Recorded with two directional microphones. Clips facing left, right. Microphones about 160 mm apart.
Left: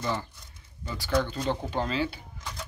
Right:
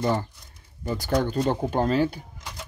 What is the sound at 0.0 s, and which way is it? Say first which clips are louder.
Speech: right 6 dB; 45° right (ahead or behind).